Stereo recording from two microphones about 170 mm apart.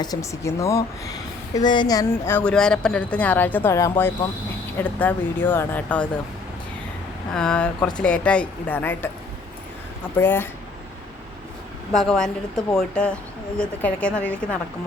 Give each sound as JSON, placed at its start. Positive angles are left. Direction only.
{"t": 0.0, "sound": "speech", "side_deg": 20}
{"t": 7.3, "sound": "a woman's voice", "side_deg": 5}
{"t": 10.2, "sound": "speech", "side_deg": 10}
{"t": 11.9, "sound": "a woman's voice", "side_deg": 0}